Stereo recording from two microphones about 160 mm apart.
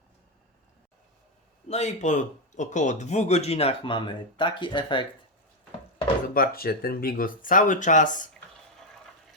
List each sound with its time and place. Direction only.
1.6 s speech: 45° left (ahead or behind)
6.2 s speech: 65° left (ahead or behind)